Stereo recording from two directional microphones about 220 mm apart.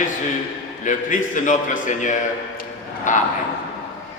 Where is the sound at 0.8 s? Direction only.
35° left (ahead or behind).